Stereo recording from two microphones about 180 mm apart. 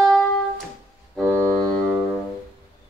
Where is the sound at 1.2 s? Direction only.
20° right (ahead or behind).